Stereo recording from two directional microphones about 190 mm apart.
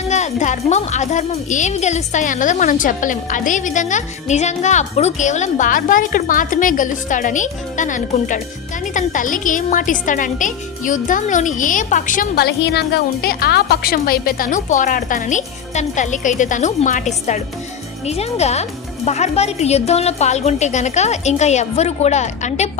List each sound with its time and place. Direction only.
0.1 s a woman's voice: 40° left (ahead or behind)